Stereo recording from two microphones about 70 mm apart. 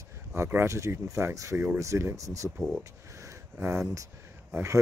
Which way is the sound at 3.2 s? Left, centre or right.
Right.